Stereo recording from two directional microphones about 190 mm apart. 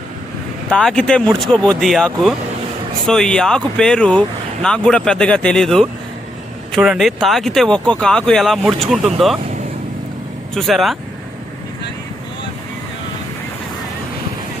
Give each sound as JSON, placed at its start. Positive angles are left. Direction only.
{"t": 0.7, "sound": "speech", "side_deg": 5}
{"t": 10.5, "sound": "speech", "side_deg": 0}